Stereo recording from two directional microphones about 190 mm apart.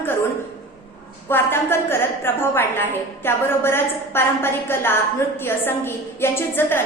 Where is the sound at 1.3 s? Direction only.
10° left (ahead or behind).